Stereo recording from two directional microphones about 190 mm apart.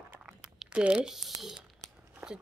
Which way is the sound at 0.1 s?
5° right (ahead or behind).